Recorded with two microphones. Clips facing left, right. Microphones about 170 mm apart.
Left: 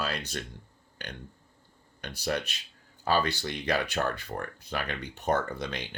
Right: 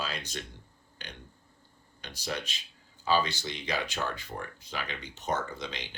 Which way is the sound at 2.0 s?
55° left (ahead or behind).